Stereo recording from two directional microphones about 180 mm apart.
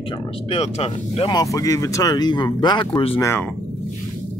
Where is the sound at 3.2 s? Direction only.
15° left (ahead or behind).